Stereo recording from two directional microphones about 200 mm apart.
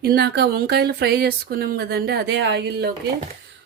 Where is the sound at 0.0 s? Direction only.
50° right (ahead or behind).